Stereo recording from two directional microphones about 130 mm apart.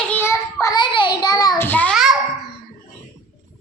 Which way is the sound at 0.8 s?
35° left (ahead or behind).